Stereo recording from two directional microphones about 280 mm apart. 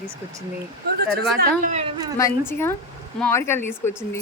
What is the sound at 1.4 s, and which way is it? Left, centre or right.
Speech, right.